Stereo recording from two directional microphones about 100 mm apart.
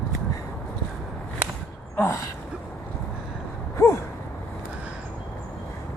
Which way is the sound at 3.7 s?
30° left (ahead or behind).